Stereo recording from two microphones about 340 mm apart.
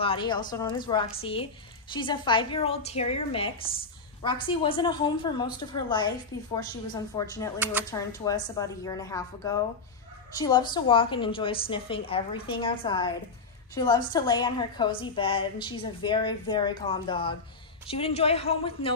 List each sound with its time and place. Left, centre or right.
0.0 s a woman's voice: centre
7.5 s speech: centre
7.9 s a woman's voice: centre